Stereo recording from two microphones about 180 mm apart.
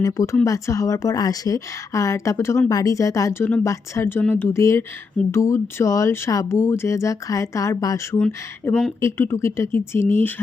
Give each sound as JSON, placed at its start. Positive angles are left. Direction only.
{"t": 0.0, "sound": "a woman's voice", "side_deg": 20}